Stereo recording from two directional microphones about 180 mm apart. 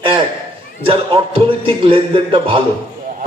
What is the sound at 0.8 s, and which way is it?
A man's voice, 30° right (ahead or behind).